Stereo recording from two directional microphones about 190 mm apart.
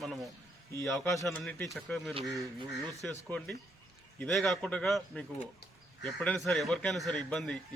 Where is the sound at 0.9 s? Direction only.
10° left (ahead or behind).